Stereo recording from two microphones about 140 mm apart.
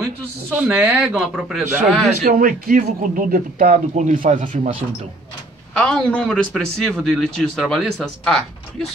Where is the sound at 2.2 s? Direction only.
90° right; by 4.7 s 60° right (ahead or behind).